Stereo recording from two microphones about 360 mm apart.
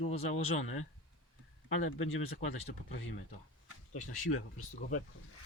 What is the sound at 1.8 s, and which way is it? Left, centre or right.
Speech, left.